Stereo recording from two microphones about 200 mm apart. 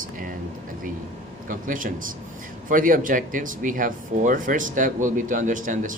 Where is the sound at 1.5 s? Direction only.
40° right (ahead or behind).